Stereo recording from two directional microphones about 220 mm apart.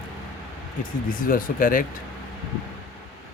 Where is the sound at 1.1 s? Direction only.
40° left (ahead or behind).